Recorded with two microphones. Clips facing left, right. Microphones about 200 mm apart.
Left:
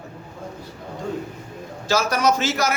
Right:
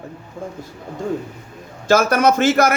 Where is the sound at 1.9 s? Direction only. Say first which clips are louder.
Right 5 dB; 55° right (ahead or behind).